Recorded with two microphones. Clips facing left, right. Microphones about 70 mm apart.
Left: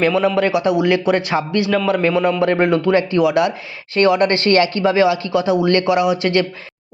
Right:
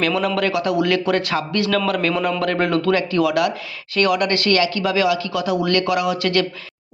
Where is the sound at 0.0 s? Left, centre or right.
Left.